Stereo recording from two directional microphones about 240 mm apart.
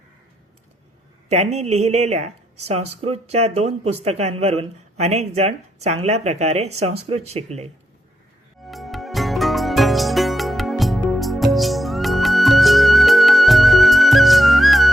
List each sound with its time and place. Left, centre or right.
1.3 s speech: right
8.6 s music: centre